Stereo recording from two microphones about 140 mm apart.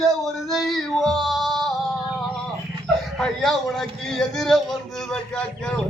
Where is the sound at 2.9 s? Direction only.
Centre (ahead or behind).